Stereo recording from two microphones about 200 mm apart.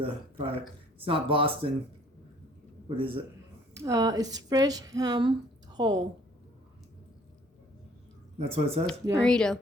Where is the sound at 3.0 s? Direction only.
25° right (ahead or behind).